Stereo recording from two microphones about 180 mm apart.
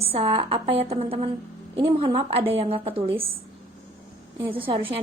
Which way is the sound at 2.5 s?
30° right (ahead or behind).